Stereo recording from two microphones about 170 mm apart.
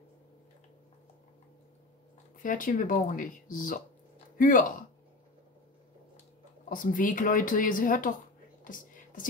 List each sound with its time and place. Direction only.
2.4 s speech: 50° left (ahead or behind)
6.7 s speech: 50° left (ahead or behind)
8.6 s whispering: 50° left (ahead or behind)